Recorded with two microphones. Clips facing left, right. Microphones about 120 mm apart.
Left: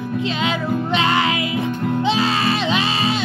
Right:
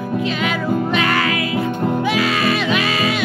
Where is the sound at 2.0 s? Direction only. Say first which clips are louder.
Left 2 dB; 30° left (ahead or behind).